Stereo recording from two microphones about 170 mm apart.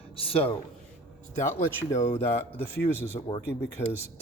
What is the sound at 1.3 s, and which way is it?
Speech, 15° left (ahead or behind).